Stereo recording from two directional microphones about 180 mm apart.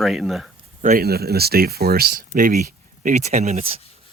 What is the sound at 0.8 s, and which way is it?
Speech, 55° right (ahead or behind).